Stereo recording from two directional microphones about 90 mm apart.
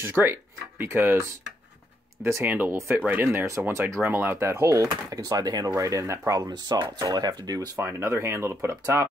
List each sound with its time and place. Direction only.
0.0 s speech: 25° right (ahead or behind)
2.4 s speech: 20° right (ahead or behind); by 7.8 s 40° right (ahead or behind)
7.8 s speech: 25° right (ahead or behind)